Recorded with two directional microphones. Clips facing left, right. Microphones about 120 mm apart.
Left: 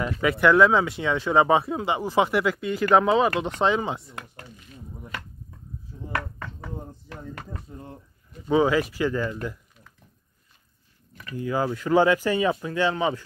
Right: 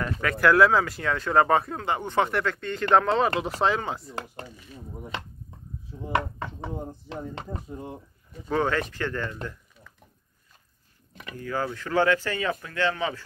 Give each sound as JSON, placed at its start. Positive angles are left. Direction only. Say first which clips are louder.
{"t": 0.0, "sound": "speech", "louder": "left 2 dB", "side_deg": 5}
{"t": 4.1, "sound": "speech", "louder": "right 5 dB", "side_deg": -30}
{"t": 8.5, "sound": "speech", "louder": "left 5 dB", "side_deg": 5}
{"t": 11.3, "sound": "speech", "louder": "left 4 dB", "side_deg": 15}